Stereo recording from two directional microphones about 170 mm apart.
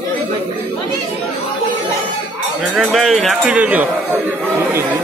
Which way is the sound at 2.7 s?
Centre (ahead or behind).